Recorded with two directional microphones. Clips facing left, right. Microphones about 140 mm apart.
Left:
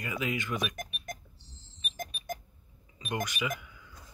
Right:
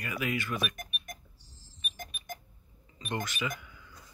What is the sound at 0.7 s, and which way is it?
Cash register, 90° left.